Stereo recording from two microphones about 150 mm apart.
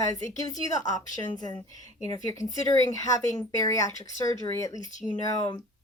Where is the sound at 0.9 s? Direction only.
25° left (ahead or behind).